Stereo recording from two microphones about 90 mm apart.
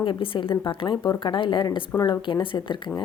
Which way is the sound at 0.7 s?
65° left (ahead or behind).